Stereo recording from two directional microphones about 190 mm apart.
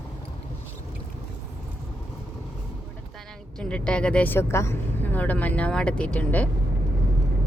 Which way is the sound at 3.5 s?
5° left (ahead or behind).